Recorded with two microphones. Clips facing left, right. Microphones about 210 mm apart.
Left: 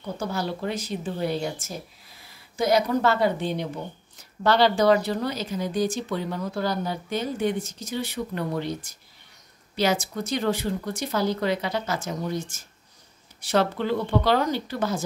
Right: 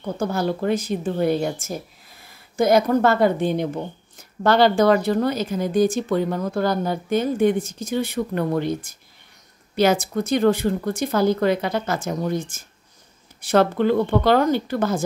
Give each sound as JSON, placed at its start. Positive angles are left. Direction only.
{"t": 0.0, "sound": "speech", "side_deg": -50}